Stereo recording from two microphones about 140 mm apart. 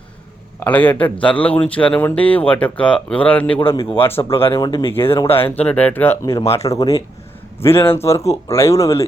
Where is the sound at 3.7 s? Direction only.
40° left (ahead or behind).